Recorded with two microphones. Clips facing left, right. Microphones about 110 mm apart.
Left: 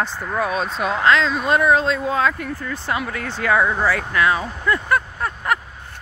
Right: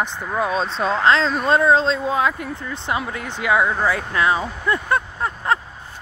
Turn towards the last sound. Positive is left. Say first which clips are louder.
# right 1 dB
turn(degrees=-25)  # may be behind; listen again after turning